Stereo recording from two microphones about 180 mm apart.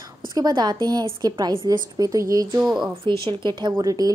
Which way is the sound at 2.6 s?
Centre (ahead or behind).